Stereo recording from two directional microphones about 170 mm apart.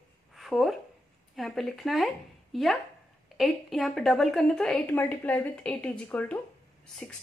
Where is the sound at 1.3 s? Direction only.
Centre (ahead or behind).